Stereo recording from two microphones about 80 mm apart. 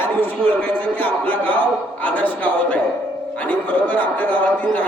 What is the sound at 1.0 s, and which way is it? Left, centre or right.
Speech, centre.